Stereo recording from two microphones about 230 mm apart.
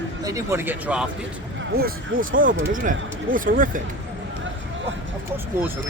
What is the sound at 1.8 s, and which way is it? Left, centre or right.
Speech, right.